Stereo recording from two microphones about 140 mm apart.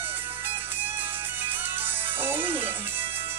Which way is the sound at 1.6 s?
15° right (ahead or behind).